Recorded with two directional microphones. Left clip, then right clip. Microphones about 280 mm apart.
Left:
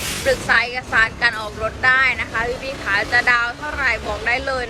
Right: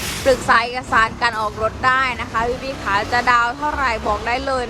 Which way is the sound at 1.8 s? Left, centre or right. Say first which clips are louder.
Left 3 dB; centre.